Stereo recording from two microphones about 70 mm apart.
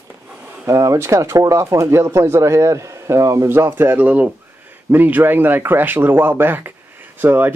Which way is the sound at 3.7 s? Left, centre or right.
Right.